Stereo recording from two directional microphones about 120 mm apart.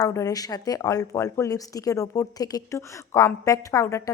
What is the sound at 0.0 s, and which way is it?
A woman's voice, 30° left (ahead or behind).